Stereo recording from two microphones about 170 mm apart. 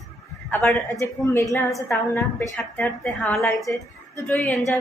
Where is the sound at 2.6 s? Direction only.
5° left (ahead or behind).